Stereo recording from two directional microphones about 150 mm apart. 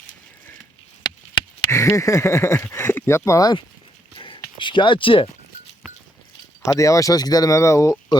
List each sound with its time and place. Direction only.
1.7 s speech: 20° left (ahead or behind)
4.1 s a sound: 35° left (ahead or behind)
6.7 s speech: 20° left (ahead or behind)